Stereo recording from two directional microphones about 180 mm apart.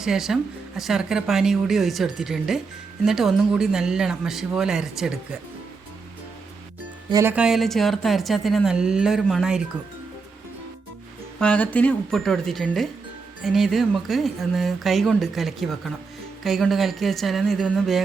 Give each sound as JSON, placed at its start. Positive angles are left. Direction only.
{"t": 0.0, "sound": "speech", "side_deg": 0}
{"t": 7.1, "sound": "speech", "side_deg": -15}
{"t": 7.3, "sound": "speech", "side_deg": -5}
{"t": 11.3, "sound": "speech", "side_deg": 5}